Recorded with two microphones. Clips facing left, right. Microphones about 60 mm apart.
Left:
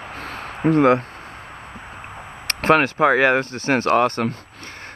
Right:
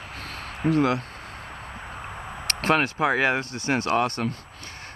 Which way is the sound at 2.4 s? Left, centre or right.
Left.